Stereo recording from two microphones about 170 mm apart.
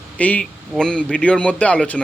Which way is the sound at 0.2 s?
10° left (ahead or behind).